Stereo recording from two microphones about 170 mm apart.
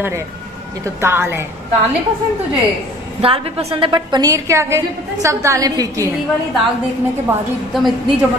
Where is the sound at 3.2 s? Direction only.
35° right (ahead or behind).